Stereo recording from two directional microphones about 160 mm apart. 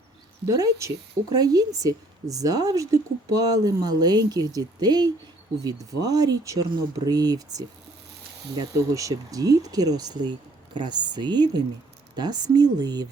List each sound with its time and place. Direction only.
0.4 s speech: 20° right (ahead or behind)